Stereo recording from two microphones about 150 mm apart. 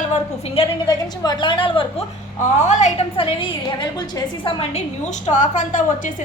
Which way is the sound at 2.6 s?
50° left (ahead or behind).